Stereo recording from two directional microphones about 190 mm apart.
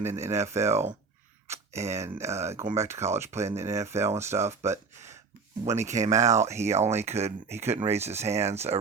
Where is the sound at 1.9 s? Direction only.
15° right (ahead or behind).